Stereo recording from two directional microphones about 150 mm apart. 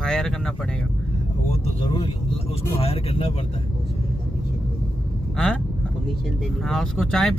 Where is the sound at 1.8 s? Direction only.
30° left (ahead or behind).